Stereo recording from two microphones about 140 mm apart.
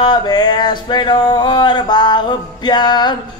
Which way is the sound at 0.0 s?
30° left (ahead or behind).